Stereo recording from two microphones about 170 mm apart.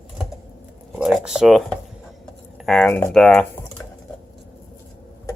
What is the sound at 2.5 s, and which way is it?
Typing, centre (ahead or behind).